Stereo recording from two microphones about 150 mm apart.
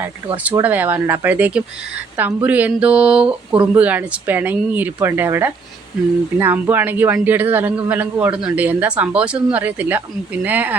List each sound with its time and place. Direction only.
0.6 s a man's voice: 10° right (ahead or behind)